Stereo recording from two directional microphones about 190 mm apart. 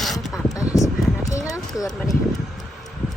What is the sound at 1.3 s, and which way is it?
Clip-clop, 15° left (ahead or behind).